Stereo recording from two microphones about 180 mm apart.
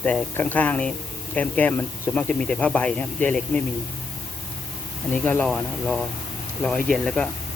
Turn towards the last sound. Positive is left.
turn(degrees=5)  # may be behind; listen again after turning